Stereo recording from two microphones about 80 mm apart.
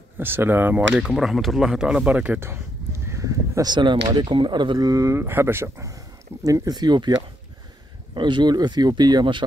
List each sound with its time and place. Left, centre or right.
0.2 s speech: right
0.9 s speech: centre
2.4 s a sound: right
3.6 s speech: right
4.8 s speech: right
6.4 s speech: right
8.1 s speech: right